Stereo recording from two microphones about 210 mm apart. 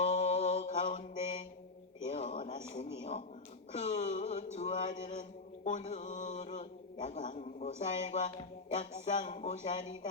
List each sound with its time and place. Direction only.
0.0 s mantra: 30° left (ahead or behind)
2.0 s a sound: 35° left (ahead or behind)
5.6 s mantra: 35° left (ahead or behind)